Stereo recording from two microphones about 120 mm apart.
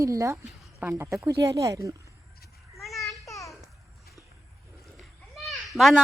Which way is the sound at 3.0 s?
25° left (ahead or behind).